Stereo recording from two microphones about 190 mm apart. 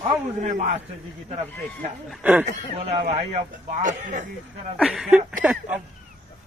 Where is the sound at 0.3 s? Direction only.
40° right (ahead or behind).